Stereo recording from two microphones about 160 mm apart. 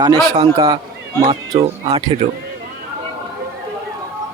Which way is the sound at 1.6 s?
40° right (ahead or behind).